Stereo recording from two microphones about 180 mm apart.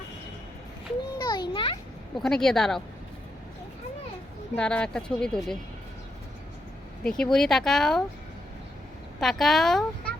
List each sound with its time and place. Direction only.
1.2 s children playing: 25° left (ahead or behind)
2.1 s speech: 5° left (ahead or behind)
4.5 s speech: 5° left (ahead or behind)
7.0 s speech: 5° left (ahead or behind)
9.2 s speech: centre (ahead or behind)